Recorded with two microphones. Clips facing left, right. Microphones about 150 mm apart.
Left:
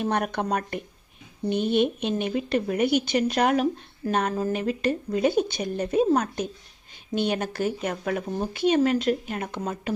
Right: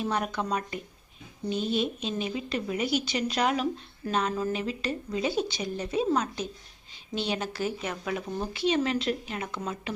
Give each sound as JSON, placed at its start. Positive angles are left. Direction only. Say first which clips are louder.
{"t": 0.0, "sound": "a woman's voice", "louder": "left 4 dB", "side_deg": 55}